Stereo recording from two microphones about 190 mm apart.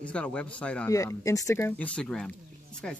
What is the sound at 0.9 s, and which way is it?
Speech, 15° left (ahead or behind).